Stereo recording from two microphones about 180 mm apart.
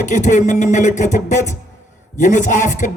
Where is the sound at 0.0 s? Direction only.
45° left (ahead or behind).